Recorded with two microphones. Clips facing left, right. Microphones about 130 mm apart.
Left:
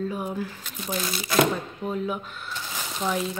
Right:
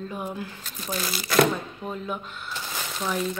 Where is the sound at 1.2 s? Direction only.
20° left (ahead or behind).